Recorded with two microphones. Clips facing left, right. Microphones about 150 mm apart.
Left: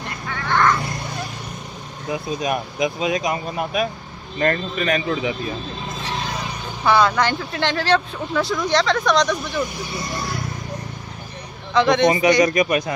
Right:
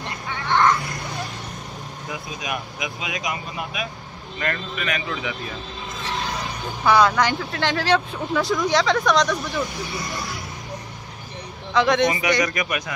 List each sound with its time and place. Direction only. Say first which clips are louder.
0.0 s a sound: left 1 dB; 20° right (ahead or behind)
2.2 s speech: left 8 dB; 40° left (ahead or behind)
5.9 s vehicle: even; 20° left (ahead or behind)
6.6 s speech: even; centre (ahead or behind)
9.5 s speech: left 2 dB; 20° left (ahead or behind)
11.7 s speech: left 2 dB; centre (ahead or behind)
12.2 s speech: left 6 dB; 25° left (ahead or behind)